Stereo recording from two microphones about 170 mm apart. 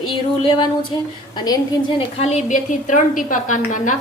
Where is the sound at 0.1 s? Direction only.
30° left (ahead or behind).